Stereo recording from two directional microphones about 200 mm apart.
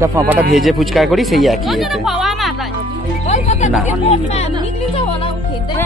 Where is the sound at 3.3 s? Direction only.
35° left (ahead or behind).